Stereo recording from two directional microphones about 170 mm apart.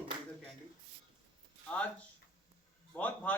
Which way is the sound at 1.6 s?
5° left (ahead or behind).